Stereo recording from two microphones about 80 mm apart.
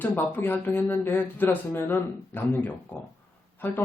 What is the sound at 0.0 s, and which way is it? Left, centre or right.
Speech, left.